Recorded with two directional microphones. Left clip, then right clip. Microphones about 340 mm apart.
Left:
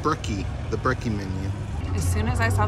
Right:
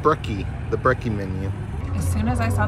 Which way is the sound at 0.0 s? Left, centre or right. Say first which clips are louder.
Right 5 dB; centre.